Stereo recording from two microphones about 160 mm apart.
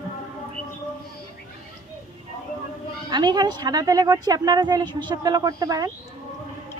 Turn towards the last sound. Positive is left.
turn(degrees=-25)  # may be behind; listen again after turning